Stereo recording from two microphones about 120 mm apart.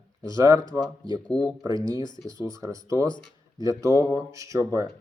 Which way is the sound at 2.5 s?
30° right (ahead or behind).